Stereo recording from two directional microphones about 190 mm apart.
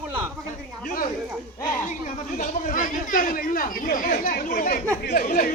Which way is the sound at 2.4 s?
45° left (ahead or behind).